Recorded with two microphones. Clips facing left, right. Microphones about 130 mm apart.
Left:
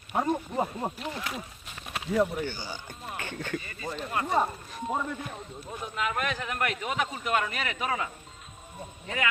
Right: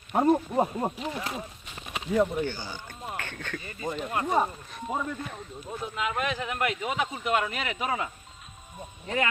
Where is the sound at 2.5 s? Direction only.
15° left (ahead or behind).